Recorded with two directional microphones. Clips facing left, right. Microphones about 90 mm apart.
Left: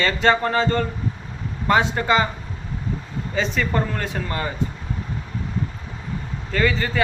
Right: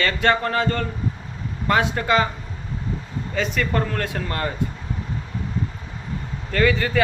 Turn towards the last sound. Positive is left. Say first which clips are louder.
# right 2 dB
turn(degrees=5)  # may be behind; listen again after turning